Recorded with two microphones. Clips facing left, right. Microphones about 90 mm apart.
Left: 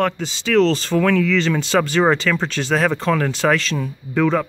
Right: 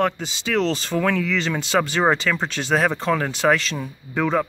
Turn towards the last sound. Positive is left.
turn(degrees=-15)  # may be behind; listen again after turning